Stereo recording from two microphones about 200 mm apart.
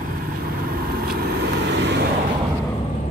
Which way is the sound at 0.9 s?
50° right (ahead or behind).